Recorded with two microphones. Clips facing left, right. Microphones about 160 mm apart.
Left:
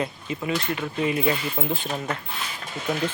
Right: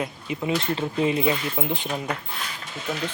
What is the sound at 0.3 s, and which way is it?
Speech, 20° right (ahead or behind).